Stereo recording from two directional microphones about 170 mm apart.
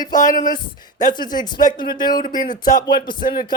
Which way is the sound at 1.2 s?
25° left (ahead or behind).